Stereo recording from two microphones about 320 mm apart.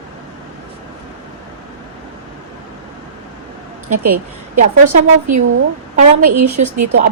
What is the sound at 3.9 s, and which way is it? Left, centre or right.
A woman's voice, right.